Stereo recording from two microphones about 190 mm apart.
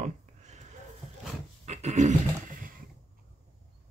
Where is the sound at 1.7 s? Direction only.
40° right (ahead or behind).